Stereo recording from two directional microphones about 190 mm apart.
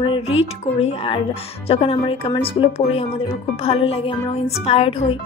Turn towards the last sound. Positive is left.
turn(degrees=30)  # may be behind; listen again after turning